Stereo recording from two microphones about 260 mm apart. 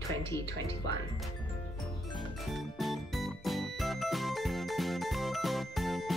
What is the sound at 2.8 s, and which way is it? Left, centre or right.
Music, centre.